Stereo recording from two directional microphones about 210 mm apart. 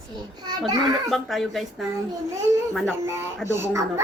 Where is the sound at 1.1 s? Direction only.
Centre (ahead or behind).